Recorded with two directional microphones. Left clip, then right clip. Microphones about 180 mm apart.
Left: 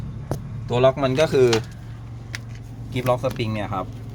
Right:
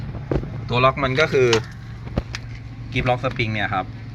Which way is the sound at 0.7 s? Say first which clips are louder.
Even; 20° left (ahead or behind).